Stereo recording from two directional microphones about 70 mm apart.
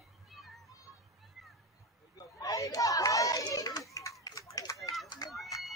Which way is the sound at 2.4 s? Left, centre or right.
Left.